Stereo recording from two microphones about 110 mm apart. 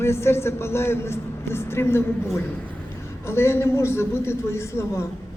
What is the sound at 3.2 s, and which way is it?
A man's voice, 25° left (ahead or behind).